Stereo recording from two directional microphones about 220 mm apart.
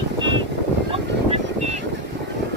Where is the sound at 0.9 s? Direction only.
30° right (ahead or behind).